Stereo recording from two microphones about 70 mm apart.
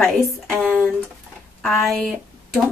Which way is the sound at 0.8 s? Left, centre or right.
Centre.